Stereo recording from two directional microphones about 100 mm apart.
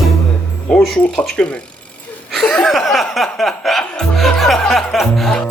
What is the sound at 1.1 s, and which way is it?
Speech, 5° left (ahead or behind).